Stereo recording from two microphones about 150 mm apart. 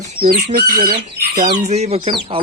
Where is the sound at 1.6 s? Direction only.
45° right (ahead or behind).